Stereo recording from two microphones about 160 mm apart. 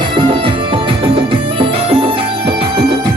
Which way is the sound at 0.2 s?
30° right (ahead or behind).